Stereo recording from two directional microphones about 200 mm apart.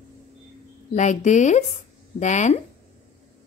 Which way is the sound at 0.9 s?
35° left (ahead or behind).